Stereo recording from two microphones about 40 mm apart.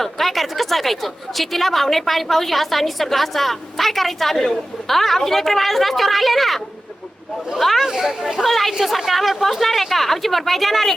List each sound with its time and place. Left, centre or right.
0.0 s a woman's voice: centre
7.6 s a woman's voice: centre
7.9 s speech: centre
8.4 s a woman's voice: centre